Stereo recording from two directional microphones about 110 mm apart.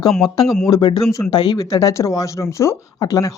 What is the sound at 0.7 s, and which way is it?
Speech, 40° left (ahead or behind).